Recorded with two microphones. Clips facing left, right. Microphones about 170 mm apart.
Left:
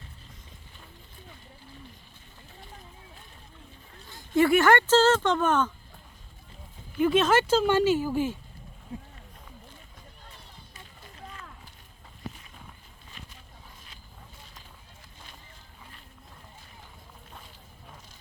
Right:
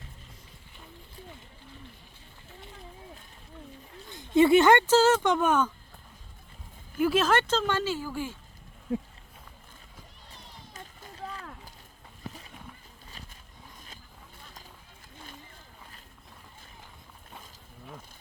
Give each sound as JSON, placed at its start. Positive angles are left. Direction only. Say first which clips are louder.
{"t": 4.1, "sound": "speech", "louder": "right 2 dB", "side_deg": -20}
{"t": 7.0, "sound": "speech", "louder": "left 2 dB", "side_deg": 0}